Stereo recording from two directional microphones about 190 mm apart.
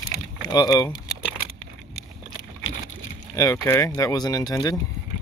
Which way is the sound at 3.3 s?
15° left (ahead or behind).